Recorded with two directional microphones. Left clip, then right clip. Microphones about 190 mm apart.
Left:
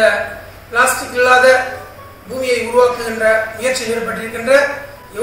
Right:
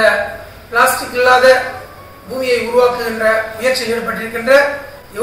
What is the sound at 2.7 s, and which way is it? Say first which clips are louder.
A man's voice: left 1 dB; centre (ahead or behind).